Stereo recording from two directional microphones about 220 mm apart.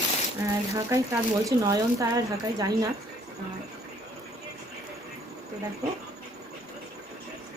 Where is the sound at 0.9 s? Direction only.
15° right (ahead or behind).